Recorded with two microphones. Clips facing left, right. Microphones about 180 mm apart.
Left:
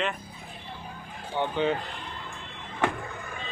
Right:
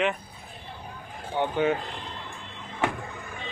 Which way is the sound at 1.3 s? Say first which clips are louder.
Right 2 dB; 10° right (ahead or behind).